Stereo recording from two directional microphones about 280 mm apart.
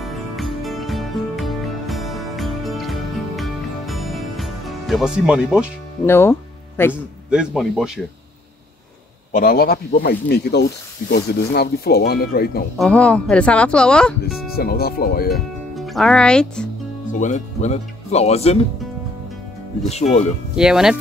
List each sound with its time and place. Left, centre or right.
0.0 s music: centre
6.0 s speech: centre
6.9 s speech: centre
9.3 s speech: left
12.7 s speech: centre
14.5 s speech: left
15.3 s speech: centre
17.1 s speech: left
19.9 s speech: left
20.5 s speech: centre